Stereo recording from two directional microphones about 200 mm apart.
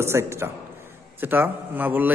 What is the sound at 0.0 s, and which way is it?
A man's voice, 15° right (ahead or behind).